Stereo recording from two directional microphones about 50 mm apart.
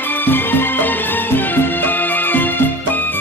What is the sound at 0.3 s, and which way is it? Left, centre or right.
Music, left.